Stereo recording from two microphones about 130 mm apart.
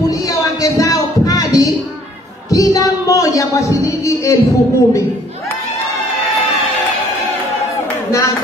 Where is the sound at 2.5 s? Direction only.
25° left (ahead or behind).